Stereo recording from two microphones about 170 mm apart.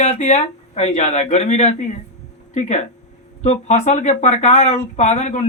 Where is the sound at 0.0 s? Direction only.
40° left (ahead or behind).